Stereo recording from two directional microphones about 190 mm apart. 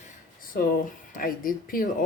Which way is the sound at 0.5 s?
50° left (ahead or behind).